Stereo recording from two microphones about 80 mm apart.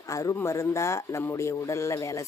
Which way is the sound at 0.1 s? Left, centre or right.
Left.